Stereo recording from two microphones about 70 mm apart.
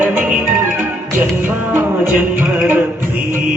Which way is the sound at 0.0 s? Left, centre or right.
Right.